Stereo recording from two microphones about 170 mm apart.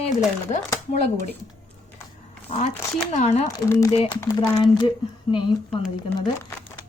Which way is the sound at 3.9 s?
35° left (ahead or behind).